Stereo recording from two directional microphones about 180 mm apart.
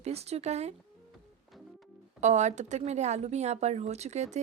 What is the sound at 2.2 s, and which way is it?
Speech, 40° right (ahead or behind).